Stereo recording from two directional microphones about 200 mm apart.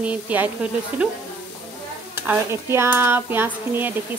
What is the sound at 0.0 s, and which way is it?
Speech, 10° right (ahead or behind).